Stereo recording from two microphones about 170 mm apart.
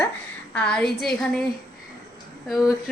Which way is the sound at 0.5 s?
5° left (ahead or behind).